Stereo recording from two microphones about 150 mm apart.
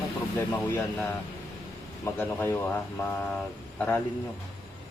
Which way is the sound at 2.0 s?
15° left (ahead or behind).